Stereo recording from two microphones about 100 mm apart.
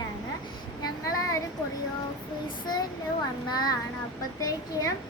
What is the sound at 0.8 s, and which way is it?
Child singing, 35° left (ahead or behind).